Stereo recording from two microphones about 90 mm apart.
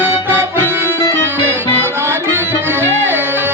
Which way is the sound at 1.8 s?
25° right (ahead or behind).